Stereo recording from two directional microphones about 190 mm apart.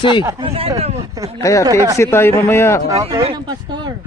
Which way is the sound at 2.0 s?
15° left (ahead or behind).